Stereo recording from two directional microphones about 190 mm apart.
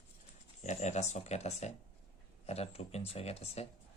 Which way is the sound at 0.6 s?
40° left (ahead or behind).